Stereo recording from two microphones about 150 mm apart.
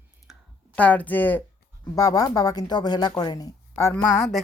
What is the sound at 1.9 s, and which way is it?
Speech, 25° left (ahead or behind).